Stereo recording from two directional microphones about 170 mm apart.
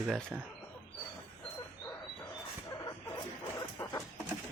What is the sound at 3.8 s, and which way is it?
Chicken, 15° left (ahead or behind).